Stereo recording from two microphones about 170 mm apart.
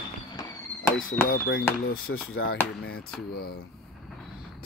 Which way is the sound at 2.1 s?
90° left.